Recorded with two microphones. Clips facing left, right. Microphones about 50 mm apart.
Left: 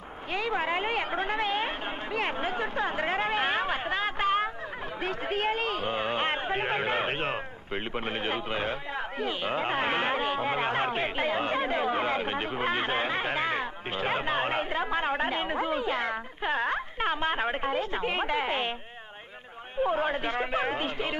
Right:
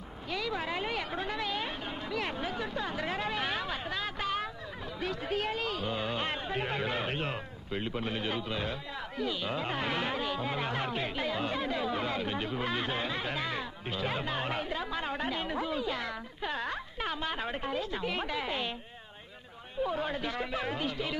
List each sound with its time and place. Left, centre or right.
0.3 s speech: left
19.8 s speech: left